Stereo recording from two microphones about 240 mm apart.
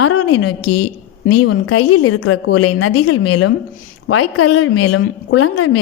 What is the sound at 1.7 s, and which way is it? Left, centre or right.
A woman's voice, left.